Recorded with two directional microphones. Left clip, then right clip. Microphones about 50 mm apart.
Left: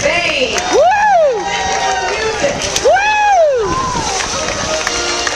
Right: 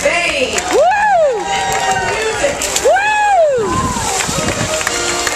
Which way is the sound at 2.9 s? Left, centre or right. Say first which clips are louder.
Left 1 dB; left.